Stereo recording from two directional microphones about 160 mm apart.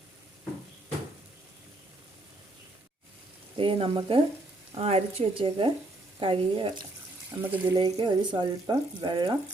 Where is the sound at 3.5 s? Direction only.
35° right (ahead or behind).